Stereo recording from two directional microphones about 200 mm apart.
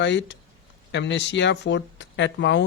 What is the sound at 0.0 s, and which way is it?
Speech, 60° left (ahead or behind).